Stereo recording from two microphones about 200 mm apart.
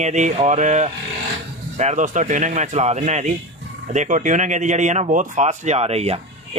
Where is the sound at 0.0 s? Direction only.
35° right (ahead or behind).